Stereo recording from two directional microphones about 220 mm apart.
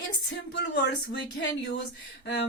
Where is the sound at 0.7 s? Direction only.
50° left (ahead or behind).